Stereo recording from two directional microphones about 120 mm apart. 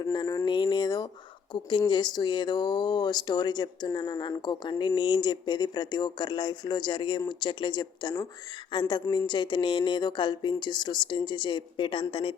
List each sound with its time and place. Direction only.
0.0 s speech: 30° left (ahead or behind)
0.5 s a sound: 40° left (ahead or behind)
1.5 s speech: 40° left (ahead or behind)